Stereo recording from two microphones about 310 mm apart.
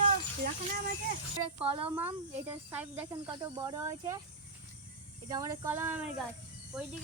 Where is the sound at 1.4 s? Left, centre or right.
Centre.